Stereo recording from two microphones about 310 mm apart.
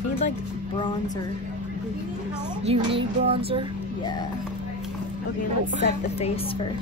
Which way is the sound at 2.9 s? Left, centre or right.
Centre.